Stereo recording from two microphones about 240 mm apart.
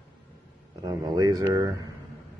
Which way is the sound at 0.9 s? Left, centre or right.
Centre.